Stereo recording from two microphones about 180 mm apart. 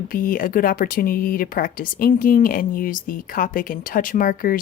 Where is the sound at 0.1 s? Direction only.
50° left (ahead or behind).